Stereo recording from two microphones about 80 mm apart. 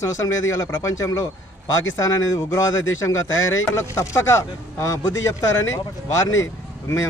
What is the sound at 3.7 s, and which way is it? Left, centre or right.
Speech, left.